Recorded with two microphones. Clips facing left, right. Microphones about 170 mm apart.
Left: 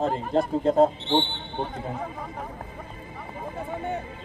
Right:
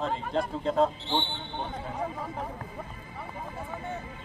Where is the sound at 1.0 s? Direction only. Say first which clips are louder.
Left 6 dB; 20° left (ahead or behind).